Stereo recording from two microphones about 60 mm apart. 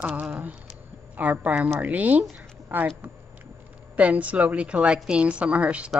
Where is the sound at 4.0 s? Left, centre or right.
Right.